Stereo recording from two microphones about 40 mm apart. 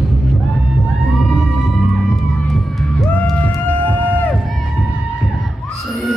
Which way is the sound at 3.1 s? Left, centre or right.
Left.